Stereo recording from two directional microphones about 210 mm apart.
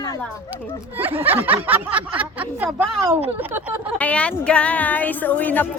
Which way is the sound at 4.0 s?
5° left (ahead or behind).